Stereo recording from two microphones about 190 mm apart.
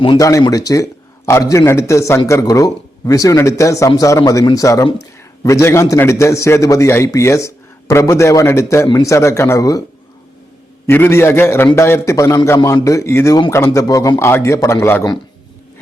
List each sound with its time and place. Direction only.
0.0 s a man's voice: 20° left (ahead or behind)
10.8 s a man's voice: 10° left (ahead or behind)